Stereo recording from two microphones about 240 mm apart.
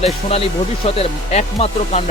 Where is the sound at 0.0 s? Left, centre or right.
Left.